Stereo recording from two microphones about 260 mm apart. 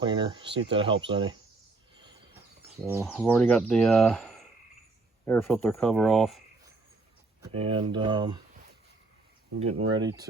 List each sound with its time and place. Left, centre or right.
0.0 s speech: centre
2.8 s speech: centre
3.1 s speech: centre
7.5 s speech: right
9.9 s speech: centre